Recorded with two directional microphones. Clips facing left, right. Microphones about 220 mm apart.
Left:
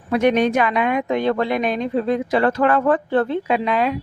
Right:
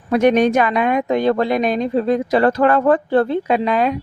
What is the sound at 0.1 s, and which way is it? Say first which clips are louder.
Speech: right 3 dB; 45° right (ahead or behind).